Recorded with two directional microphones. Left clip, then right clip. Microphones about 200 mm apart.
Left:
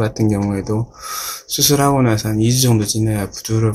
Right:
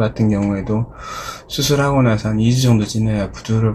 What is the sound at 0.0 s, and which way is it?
Speech, 45° left (ahead or behind).